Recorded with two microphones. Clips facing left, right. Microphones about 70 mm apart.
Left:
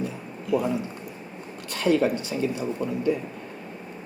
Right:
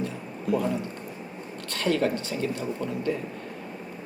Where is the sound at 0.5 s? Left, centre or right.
Right.